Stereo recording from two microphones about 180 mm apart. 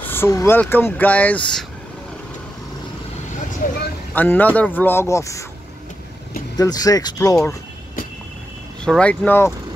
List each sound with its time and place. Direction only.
0.0 s speech: 10° left (ahead or behind)
3.6 s speech: 50° left (ahead or behind)
4.1 s speech: 10° left (ahead or behind)
6.5 s speech: 20° left (ahead or behind)
8.8 s speech: 5° left (ahead or behind)